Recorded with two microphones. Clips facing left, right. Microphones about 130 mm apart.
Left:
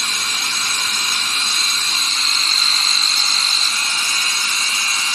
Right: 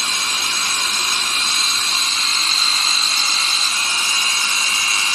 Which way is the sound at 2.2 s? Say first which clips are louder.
Right 1 dB; centre (ahead or behind).